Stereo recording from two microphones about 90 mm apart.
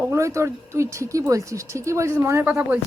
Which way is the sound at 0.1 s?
35° right (ahead or behind).